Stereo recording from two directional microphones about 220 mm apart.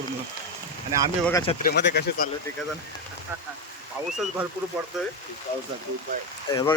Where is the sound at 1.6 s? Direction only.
50° left (ahead or behind).